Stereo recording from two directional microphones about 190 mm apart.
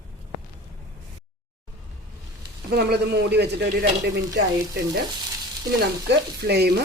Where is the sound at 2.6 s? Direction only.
60° right (ahead or behind).